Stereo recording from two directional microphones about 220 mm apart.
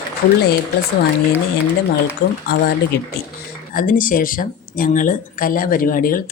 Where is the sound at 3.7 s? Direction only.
40° left (ahead or behind).